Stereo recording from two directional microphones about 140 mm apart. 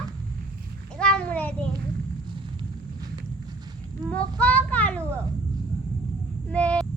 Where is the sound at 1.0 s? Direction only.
5° left (ahead or behind).